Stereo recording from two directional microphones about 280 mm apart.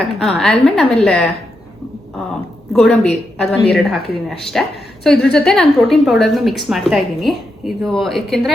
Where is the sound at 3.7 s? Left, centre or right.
Centre.